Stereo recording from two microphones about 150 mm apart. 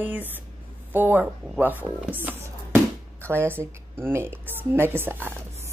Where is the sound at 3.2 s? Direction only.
15° right (ahead or behind).